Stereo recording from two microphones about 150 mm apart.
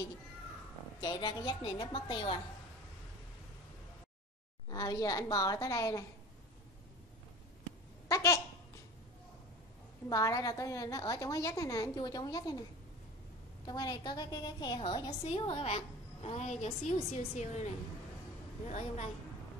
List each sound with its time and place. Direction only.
1.0 s a woman's voice: 30° left (ahead or behind)
4.6 s a woman's voice: 25° left (ahead or behind)
8.1 s a sound: 20° left (ahead or behind)
10.0 s a woman's voice: 25° left (ahead or behind)
13.7 s a woman's voice: 25° left (ahead or behind)
15.2 s a woman's voice: 40° left (ahead or behind)